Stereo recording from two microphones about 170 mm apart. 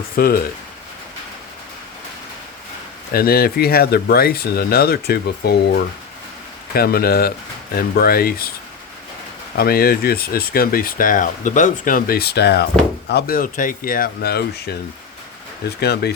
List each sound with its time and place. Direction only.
0.2 s speech: 60° left (ahead or behind)
3.1 s speech: 65° left (ahead or behind)
6.7 s speech: 65° left (ahead or behind)
9.6 s speech: 65° left (ahead or behind)
15.8 s speech: 70° left (ahead or behind)